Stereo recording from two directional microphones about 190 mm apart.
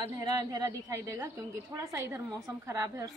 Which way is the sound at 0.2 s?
20° right (ahead or behind).